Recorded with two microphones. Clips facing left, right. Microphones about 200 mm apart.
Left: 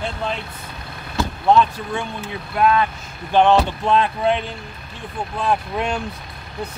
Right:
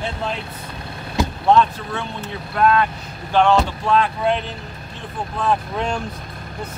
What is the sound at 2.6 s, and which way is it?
Speech, 15° left (ahead or behind).